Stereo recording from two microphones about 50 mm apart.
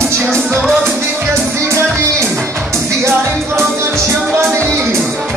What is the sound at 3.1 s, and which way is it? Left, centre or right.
Music, right.